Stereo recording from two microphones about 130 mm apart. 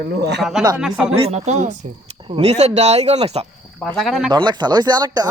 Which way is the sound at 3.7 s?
5° left (ahead or behind).